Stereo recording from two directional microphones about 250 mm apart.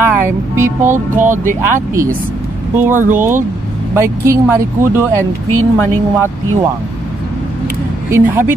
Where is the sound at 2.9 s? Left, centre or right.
Right.